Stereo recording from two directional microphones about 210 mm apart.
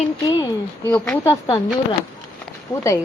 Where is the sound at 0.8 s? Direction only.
10° left (ahead or behind).